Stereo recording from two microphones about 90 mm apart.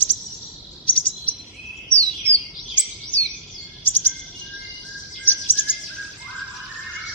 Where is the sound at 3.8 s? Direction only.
20° left (ahead or behind).